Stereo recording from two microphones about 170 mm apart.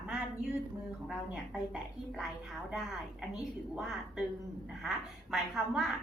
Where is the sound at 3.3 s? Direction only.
5° right (ahead or behind).